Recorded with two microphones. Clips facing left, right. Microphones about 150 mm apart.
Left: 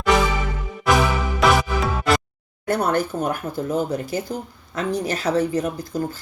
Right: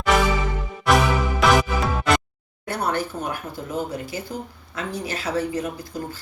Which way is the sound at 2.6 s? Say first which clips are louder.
Left 4 dB; 45° left (ahead or behind).